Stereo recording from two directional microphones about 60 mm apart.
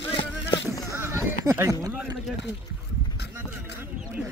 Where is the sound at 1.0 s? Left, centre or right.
Right.